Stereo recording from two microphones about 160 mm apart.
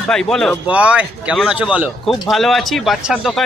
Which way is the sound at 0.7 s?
10° right (ahead or behind).